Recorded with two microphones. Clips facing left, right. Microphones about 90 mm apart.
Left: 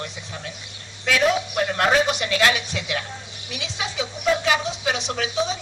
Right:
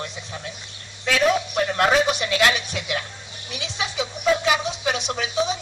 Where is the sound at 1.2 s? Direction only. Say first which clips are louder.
Right 1 dB; 5° left (ahead or behind).